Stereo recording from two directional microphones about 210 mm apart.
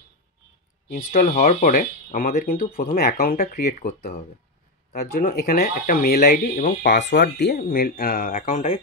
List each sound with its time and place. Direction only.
0.8 s speech: 40° left (ahead or behind)
6.9 s speech: 55° left (ahead or behind); by 8.7 s 35° left (ahead or behind)